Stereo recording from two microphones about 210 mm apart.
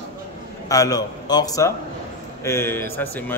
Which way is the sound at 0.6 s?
15° left (ahead or behind).